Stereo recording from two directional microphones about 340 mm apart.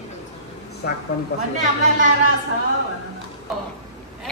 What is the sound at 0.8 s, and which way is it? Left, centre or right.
Speech, left.